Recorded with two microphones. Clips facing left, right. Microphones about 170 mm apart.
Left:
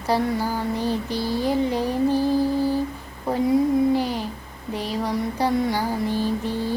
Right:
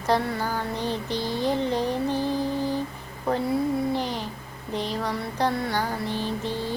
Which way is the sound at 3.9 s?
10° left (ahead or behind).